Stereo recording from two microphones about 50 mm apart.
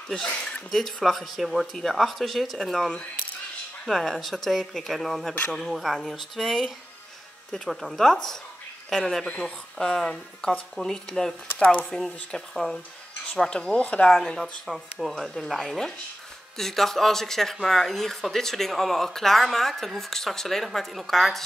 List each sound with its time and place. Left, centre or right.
0.1 s speech: left
0.7 s speech: centre
9.4 s speech: centre
11.5 s speech: left
12.3 s speech: centre; by 14.1 s left
14.7 s speech: centre
15.1 s speech: centre